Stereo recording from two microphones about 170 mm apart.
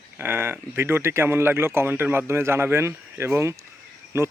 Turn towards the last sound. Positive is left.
turn(degrees=-15)  # may be behind; listen again after turning